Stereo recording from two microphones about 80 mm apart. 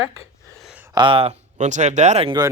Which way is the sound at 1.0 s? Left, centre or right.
Right.